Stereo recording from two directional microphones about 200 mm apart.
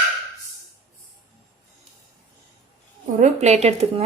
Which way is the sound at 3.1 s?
35° right (ahead or behind).